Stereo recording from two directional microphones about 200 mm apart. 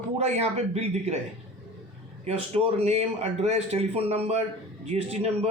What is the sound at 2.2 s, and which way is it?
A man's voice, 30° right (ahead or behind).